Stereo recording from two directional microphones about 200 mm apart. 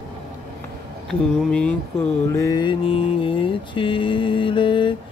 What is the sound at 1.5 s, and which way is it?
Mantra, 5° left (ahead or behind).